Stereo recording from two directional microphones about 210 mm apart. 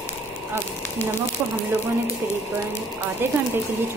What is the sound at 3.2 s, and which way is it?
Speech, 10° right (ahead or behind).